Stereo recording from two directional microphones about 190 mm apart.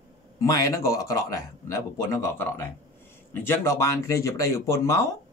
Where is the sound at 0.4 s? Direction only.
15° left (ahead or behind).